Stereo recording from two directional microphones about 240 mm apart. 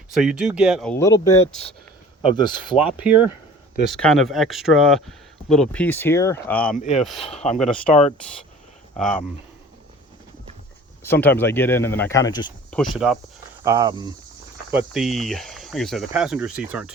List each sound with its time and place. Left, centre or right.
0.1 s speech: centre
2.7 s speech: centre
6.7 s speech: left
7.0 s speech: centre
7.3 s speech: left
7.6 s speech: centre
9.0 s speech: centre
11.0 s speech: centre
12.7 s speech: centre
13.7 s speech: centre
14.7 s speech: centre